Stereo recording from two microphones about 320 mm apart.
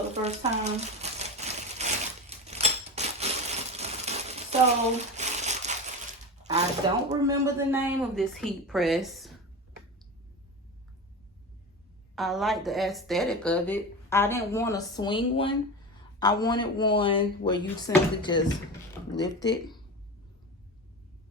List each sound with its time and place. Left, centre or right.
0.1 s speech: right
1.2 s a sound: right
5.1 s crumpling: right
7.1 s speech: centre
12.1 s speech: centre